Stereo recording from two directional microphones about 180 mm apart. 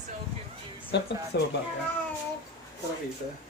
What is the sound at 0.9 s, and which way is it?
Speech, 70° left (ahead or behind).